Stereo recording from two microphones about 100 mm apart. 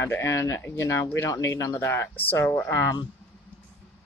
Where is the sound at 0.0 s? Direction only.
25° left (ahead or behind).